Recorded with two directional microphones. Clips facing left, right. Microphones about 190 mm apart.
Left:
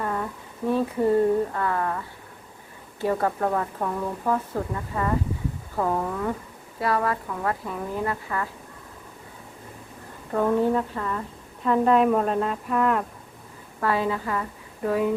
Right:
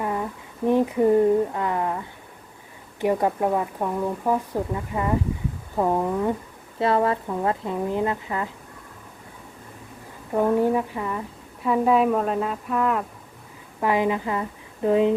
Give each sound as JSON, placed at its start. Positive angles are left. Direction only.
{"t": 0.0, "sound": "a sound", "side_deg": -15}
{"t": 0.7, "sound": "a woman's voice", "side_deg": -15}
{"t": 10.3, "sound": "a woman's voice", "side_deg": -15}
{"t": 13.7, "sound": "a woman's voice", "side_deg": -15}